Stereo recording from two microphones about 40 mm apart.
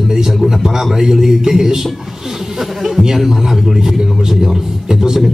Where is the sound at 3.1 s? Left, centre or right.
Centre.